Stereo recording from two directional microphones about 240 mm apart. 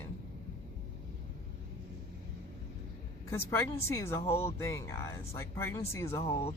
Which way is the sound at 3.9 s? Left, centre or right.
Centre.